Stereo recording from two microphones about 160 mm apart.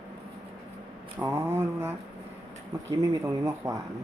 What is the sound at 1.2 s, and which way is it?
Speech, 15° right (ahead or behind).